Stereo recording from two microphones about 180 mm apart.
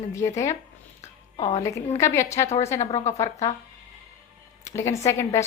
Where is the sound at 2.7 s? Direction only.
40° left (ahead or behind).